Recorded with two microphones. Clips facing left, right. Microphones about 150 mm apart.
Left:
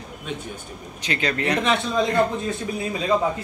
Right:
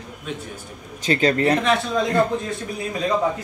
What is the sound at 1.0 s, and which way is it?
Speech, 40° right (ahead or behind).